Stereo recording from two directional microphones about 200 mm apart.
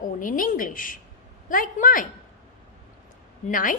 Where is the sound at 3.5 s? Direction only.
40° left (ahead or behind).